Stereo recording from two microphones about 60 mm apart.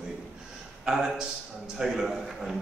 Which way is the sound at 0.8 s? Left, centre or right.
Centre.